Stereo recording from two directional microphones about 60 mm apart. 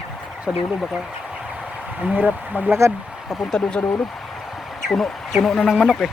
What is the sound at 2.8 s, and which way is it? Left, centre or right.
Speech, right.